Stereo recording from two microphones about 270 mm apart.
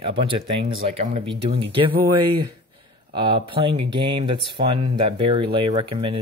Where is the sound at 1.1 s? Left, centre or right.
Right.